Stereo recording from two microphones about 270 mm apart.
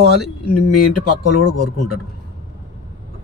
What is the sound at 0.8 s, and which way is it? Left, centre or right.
Speech, left.